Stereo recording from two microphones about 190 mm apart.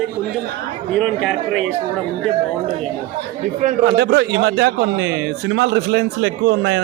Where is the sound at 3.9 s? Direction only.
65° right (ahead or behind).